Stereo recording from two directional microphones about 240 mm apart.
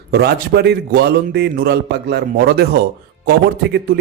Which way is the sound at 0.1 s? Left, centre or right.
Right.